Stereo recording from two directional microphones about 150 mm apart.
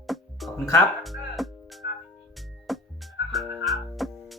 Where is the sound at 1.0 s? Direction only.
Centre (ahead or behind).